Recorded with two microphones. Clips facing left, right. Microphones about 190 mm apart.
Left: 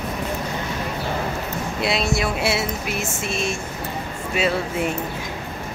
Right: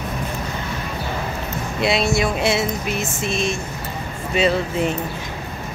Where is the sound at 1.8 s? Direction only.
Centre (ahead or behind).